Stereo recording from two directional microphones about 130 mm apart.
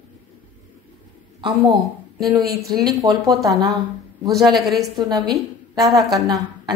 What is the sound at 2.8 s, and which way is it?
Speech, 30° right (ahead or behind).